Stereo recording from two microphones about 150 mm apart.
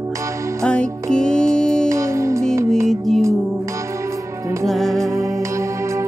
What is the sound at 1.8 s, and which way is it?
Music, 20° right (ahead or behind).